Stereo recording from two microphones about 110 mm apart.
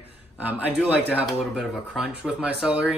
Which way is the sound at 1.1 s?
5° right (ahead or behind).